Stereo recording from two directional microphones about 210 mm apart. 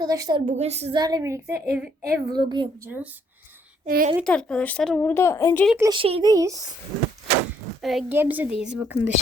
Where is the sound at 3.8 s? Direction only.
45° right (ahead or behind).